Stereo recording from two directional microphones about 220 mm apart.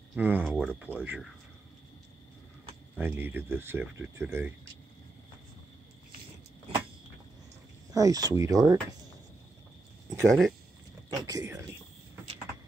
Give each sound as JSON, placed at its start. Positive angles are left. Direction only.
{"t": 0.1, "sound": "speech", "side_deg": -10}
{"t": 3.0, "sound": "speech", "side_deg": -10}
{"t": 7.9, "sound": "speech", "side_deg": -15}
{"t": 10.0, "sound": "speech", "side_deg": 0}
{"t": 11.1, "sound": "speech", "side_deg": -15}